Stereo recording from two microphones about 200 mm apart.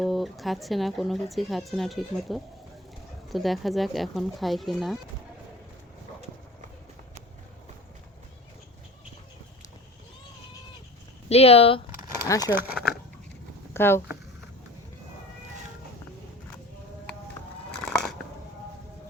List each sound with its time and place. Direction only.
0.0 s speech: centre (ahead or behind)
11.3 s speech: 30° left (ahead or behind)
12.4 s speech: 10° right (ahead or behind)
13.7 s speech: 10° left (ahead or behind)
17.8 s biting: 5° left (ahead or behind)